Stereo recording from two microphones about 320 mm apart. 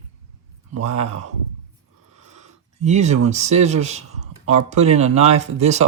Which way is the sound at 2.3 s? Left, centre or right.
Right.